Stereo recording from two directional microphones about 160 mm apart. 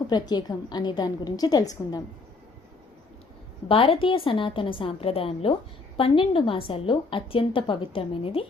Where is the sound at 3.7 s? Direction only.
35° left (ahead or behind).